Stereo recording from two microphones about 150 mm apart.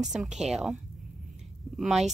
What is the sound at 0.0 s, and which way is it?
Speech, 5° right (ahead or behind).